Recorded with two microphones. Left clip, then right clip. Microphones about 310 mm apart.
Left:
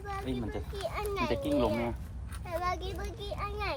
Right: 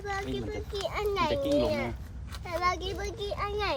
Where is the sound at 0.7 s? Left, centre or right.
Right.